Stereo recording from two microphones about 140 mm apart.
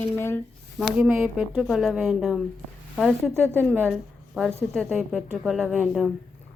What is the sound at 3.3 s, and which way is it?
Speech, 15° right (ahead or behind).